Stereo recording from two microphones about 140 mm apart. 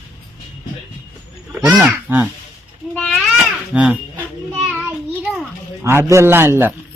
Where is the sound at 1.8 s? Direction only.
15° right (ahead or behind).